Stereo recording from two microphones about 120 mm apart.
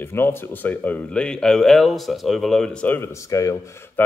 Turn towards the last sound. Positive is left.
turn(degrees=20)  # may be behind; listen again after turning